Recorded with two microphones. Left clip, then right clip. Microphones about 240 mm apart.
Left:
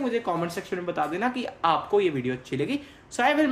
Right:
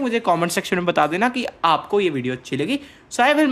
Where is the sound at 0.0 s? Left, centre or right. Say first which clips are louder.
Right 7 dB; right.